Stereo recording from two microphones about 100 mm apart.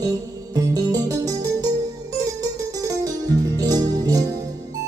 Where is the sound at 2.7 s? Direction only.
35° right (ahead or behind).